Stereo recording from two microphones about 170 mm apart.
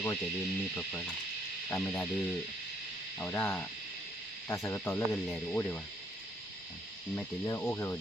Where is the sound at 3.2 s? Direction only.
10° left (ahead or behind).